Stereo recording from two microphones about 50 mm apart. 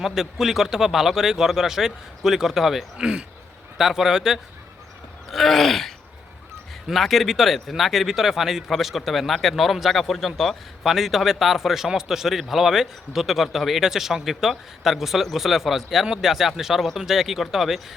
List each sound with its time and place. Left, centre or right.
0.0 s speech: centre
3.0 s speech: centre
5.3 s speech: centre